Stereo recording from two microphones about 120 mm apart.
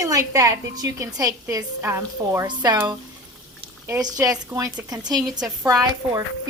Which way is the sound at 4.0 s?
30° right (ahead or behind).